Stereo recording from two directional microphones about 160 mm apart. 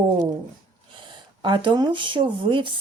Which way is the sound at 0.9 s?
30° right (ahead or behind).